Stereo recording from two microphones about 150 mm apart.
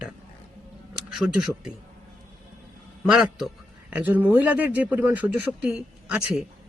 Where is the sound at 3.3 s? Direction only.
5° right (ahead or behind).